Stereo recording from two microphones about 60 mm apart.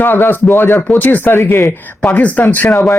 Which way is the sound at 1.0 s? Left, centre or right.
Left.